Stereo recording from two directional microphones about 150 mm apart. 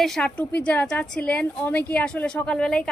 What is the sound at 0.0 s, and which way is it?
A woman's voice, 5° left (ahead or behind).